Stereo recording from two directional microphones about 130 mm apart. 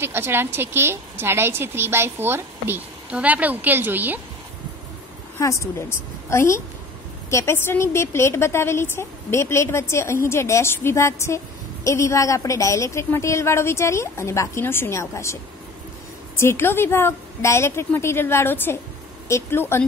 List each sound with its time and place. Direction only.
0.0 s a woman's voice: 15° right (ahead or behind)
5.4 s a woman's voice: 25° left (ahead or behind)
16.3 s a woman's voice: 20° left (ahead or behind)